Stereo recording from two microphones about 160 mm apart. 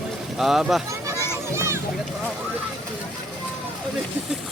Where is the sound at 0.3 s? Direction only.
Centre (ahead or behind).